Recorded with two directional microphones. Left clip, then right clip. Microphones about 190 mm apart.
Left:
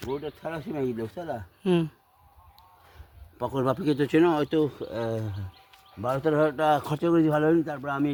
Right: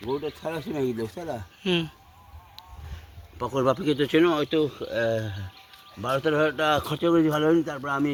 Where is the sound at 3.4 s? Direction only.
45° left (ahead or behind); by 5.3 s 65° left (ahead or behind).